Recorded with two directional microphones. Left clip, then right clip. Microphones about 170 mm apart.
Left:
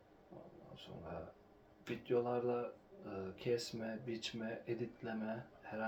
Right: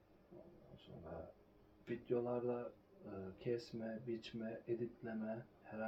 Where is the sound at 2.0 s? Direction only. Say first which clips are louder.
Left 4 dB; 20° left (ahead or behind).